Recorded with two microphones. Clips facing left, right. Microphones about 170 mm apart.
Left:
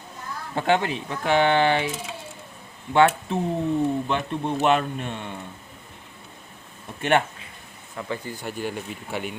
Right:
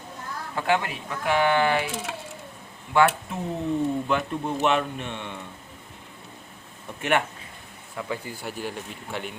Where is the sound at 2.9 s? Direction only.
25° left (ahead or behind).